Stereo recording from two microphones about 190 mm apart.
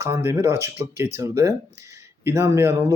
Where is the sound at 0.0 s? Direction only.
15° right (ahead or behind).